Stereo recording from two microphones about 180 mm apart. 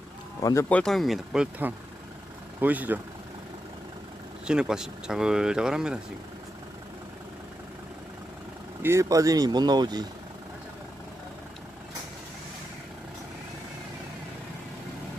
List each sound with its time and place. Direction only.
0.4 s speech: 15° left (ahead or behind)
0.8 s speech: centre (ahead or behind)
4.4 s speech: 5° right (ahead or behind)
8.8 s speech: 15° right (ahead or behind)